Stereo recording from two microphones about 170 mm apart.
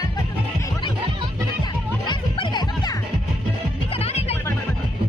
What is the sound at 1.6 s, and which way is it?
Music, 25° left (ahead or behind).